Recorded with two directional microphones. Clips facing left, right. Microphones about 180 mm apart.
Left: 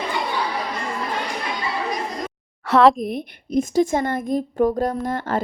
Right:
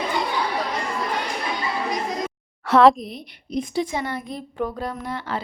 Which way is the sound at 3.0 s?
50° left (ahead or behind).